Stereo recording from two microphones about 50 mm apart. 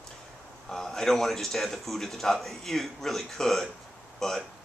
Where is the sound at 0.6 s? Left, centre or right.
Centre.